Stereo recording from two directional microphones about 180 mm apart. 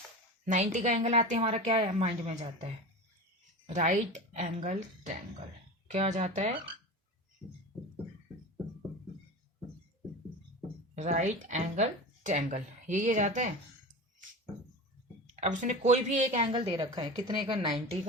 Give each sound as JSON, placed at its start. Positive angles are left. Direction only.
{"t": 0.5, "sound": "a woman's voice", "side_deg": -40}
{"t": 3.8, "sound": "a woman's voice", "side_deg": -45}
{"t": 10.9, "sound": "a woman's voice", "side_deg": -40}
{"t": 15.3, "sound": "speech", "side_deg": -40}